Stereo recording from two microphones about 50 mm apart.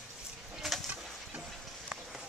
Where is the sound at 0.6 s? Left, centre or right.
Centre.